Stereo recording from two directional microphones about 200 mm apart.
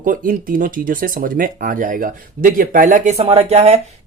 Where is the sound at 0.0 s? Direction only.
45° right (ahead or behind).